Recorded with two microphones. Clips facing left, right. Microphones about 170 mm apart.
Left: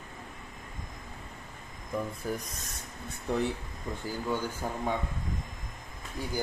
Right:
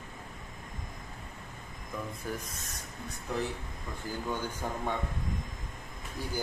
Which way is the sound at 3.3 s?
30° left (ahead or behind).